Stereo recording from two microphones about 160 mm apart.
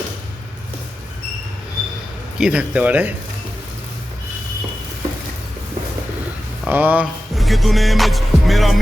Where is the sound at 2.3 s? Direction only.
5° right (ahead or behind).